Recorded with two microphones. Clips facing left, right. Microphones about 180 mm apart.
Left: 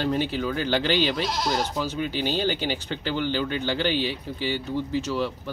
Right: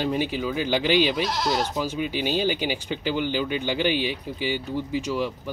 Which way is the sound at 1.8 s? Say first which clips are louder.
Right 1 dB; 10° right (ahead or behind).